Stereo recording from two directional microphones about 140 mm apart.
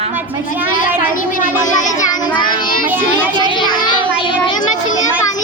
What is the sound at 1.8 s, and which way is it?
Child singing, 60° left (ahead or behind).